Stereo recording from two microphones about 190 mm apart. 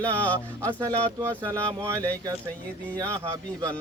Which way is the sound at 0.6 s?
15° right (ahead or behind).